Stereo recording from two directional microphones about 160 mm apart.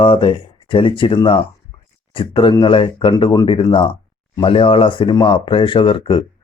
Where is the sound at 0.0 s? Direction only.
30° left (ahead or behind).